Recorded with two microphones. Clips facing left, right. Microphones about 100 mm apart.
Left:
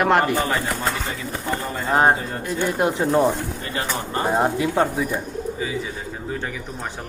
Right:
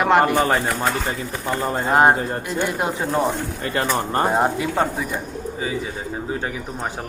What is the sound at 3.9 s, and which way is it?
Speech, 45° right (ahead or behind).